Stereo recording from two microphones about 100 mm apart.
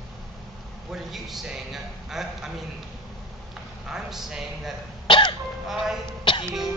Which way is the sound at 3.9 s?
5° right (ahead or behind).